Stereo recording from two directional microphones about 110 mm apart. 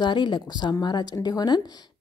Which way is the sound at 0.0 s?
45° left (ahead or behind).